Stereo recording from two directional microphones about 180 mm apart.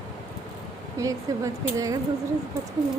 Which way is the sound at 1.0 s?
20° right (ahead or behind).